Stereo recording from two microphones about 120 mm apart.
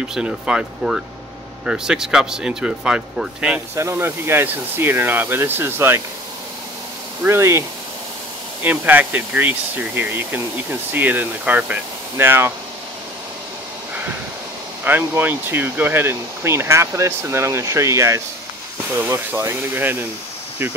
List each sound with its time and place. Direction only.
0.1 s speech: 5° right (ahead or behind)
3.7 s speech: 20° right (ahead or behind)
7.2 s speech: 20° right (ahead or behind)
8.6 s speech: 15° right (ahead or behind)
14.9 s speech: 15° right (ahead or behind)